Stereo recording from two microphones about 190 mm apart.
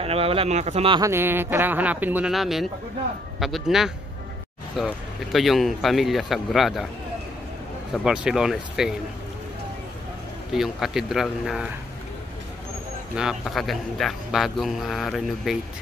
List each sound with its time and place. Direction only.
0.0 s speech: 30° right (ahead or behind)
1.0 s speech: 10° right (ahead or behind)
7.9 s speech: 5° right (ahead or behind)
10.5 s speech: 5° right (ahead or behind)
13.1 s speech: 5° right (ahead or behind)